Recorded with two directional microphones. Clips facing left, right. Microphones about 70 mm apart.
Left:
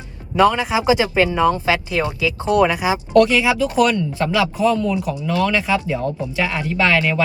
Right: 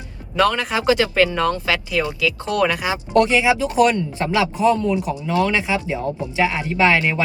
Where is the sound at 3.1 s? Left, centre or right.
Right.